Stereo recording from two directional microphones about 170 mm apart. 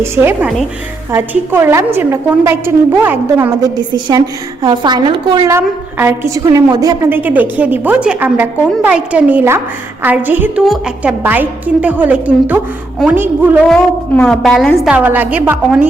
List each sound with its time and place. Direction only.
0.0 s a woman's voice: 10° right (ahead or behind)
3.8 s a woman's voice: 25° right (ahead or behind)
13.7 s a woman's voice: 5° left (ahead or behind)
14.9 s a woman's voice: 10° right (ahead or behind)